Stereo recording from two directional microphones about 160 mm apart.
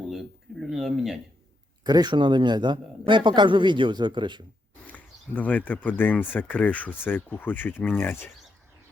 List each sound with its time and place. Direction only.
0.7 s speech: centre (ahead or behind)
1.8 s a man's voice: 25° right (ahead or behind)
4.9 s speech: 10° left (ahead or behind)